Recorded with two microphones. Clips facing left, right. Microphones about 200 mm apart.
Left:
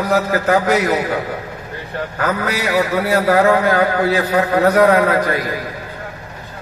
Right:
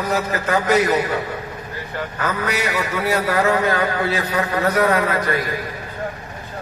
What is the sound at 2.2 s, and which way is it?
A man's voice, 65° left (ahead or behind).